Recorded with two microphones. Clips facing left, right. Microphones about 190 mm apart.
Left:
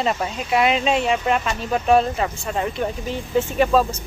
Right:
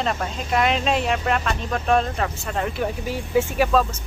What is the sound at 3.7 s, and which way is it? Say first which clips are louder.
Speech: left 2 dB; 5° left (ahead or behind).